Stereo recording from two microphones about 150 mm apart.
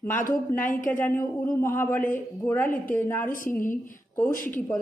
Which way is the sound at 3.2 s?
60° left (ahead or behind).